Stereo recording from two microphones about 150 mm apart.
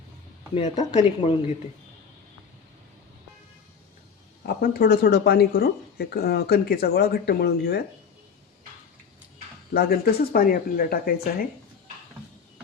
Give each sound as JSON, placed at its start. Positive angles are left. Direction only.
{"t": 0.5, "sound": "speech", "side_deg": 50}
{"t": 4.4, "sound": "speech", "side_deg": 80}
{"t": 9.7, "sound": "speech", "side_deg": 85}